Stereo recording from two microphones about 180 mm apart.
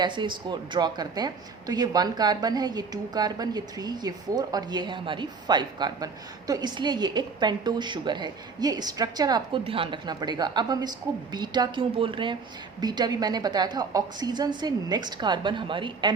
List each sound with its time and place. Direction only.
0.0 s speech: 25° right (ahead or behind)